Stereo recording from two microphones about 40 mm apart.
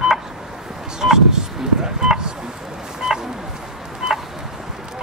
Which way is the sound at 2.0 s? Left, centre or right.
Centre.